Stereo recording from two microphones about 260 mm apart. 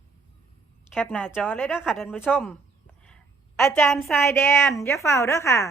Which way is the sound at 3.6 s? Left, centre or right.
Centre.